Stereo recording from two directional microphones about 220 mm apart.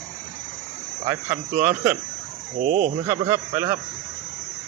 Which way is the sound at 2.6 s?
35° right (ahead or behind).